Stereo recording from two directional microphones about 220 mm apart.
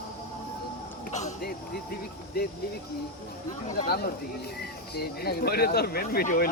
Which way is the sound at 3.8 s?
45° left (ahead or behind).